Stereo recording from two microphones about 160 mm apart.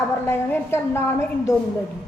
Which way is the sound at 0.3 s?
15° left (ahead or behind).